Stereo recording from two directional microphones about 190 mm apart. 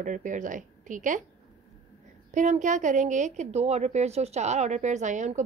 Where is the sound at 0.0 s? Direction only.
40° right (ahead or behind).